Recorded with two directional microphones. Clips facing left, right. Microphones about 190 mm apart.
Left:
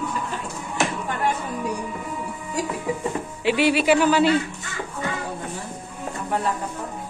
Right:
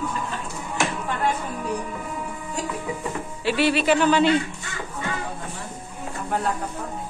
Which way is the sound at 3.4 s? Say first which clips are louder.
Left 2 dB; 15° left (ahead or behind).